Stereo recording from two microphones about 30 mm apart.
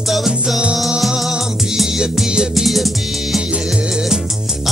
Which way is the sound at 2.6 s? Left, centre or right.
Centre.